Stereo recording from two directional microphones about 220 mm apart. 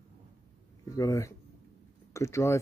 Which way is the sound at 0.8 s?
15° left (ahead or behind).